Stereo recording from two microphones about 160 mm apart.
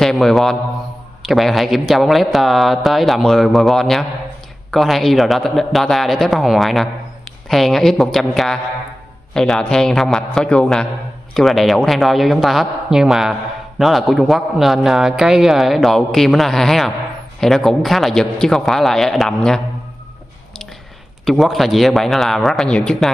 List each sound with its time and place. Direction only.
0.0 s a man's voice: centre (ahead or behind)
21.3 s a man's voice: centre (ahead or behind)